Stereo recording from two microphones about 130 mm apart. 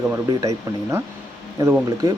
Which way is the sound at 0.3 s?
25° right (ahead or behind).